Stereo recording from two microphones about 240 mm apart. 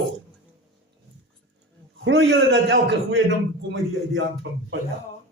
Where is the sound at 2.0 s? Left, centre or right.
Right.